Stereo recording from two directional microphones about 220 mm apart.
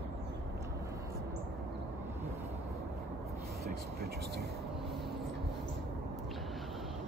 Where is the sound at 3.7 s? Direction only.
45° right (ahead or behind).